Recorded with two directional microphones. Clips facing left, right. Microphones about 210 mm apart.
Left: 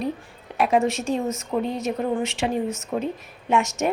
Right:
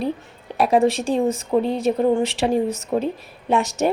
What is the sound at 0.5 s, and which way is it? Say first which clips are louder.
A woman's voice: right 4 dB; 35° right (ahead or behind).